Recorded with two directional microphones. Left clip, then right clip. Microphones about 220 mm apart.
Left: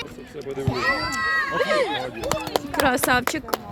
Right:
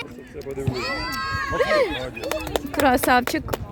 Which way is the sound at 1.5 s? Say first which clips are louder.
Right 1 dB; 20° right (ahead or behind).